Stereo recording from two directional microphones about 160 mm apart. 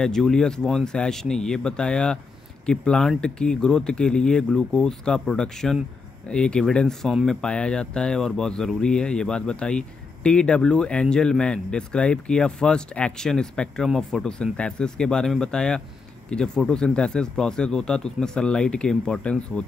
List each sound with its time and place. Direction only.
0.0 s speech: 5° left (ahead or behind)